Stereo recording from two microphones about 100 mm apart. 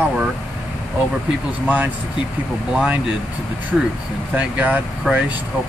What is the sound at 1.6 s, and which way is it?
Speech, 15° right (ahead or behind).